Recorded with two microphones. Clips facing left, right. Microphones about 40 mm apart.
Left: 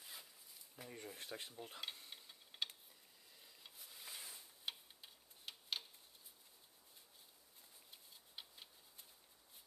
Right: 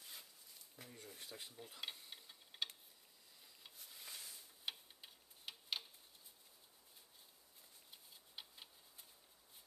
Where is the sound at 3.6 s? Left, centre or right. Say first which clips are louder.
Even; centre.